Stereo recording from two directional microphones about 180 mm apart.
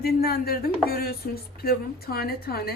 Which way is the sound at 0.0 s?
55° left (ahead or behind).